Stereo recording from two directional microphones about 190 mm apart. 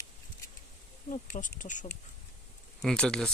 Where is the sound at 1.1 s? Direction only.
40° left (ahead or behind).